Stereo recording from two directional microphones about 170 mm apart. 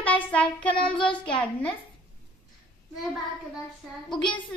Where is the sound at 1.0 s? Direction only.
5° left (ahead or behind).